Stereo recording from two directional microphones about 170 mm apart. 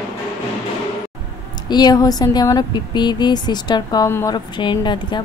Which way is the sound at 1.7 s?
25° left (ahead or behind).